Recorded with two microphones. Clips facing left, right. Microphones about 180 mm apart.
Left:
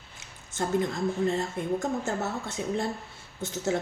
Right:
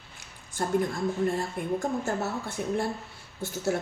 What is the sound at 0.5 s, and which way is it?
A woman's voice, 20° left (ahead or behind).